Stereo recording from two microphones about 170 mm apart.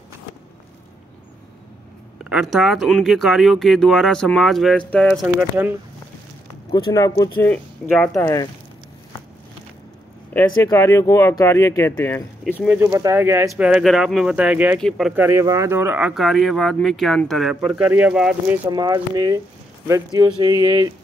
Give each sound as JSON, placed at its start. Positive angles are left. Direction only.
{"t": 2.2, "sound": "speech", "side_deg": -5}
{"t": 5.2, "sound": "speech", "side_deg": -10}
{"t": 6.7, "sound": "speech", "side_deg": 20}
{"t": 7.4, "sound": "speech", "side_deg": 5}
{"t": 8.1, "sound": "speech", "side_deg": 20}
{"t": 10.3, "sound": "speech", "side_deg": 15}
{"t": 12.5, "sound": "speech", "side_deg": -10}
{"t": 15.1, "sound": "speech", "side_deg": -15}
{"t": 18.7, "sound": "speech", "side_deg": -25}